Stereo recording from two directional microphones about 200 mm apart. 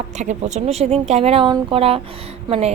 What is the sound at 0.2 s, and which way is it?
A woman's voice, 35° right (ahead or behind).